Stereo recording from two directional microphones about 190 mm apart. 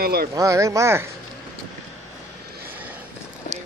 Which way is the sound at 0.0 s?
55° right (ahead or behind).